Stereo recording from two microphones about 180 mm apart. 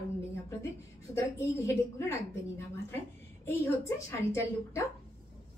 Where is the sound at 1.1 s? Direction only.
15° left (ahead or behind).